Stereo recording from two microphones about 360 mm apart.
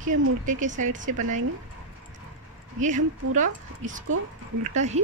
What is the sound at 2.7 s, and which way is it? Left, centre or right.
Speech, centre.